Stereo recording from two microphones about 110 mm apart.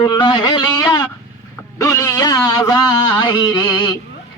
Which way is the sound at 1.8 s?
30° left (ahead or behind).